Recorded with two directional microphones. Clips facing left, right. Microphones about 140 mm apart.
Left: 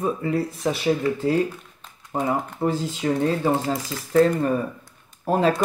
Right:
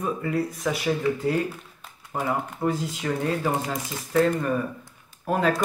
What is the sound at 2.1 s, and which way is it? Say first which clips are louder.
Speech: left 3 dB; 25° left (ahead or behind).